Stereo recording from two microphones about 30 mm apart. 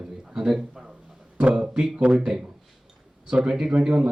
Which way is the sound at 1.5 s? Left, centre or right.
Right.